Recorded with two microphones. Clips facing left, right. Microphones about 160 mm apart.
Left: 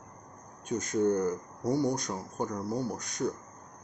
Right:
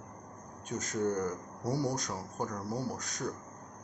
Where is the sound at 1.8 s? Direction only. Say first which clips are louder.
Left 4 dB; centre (ahead or behind).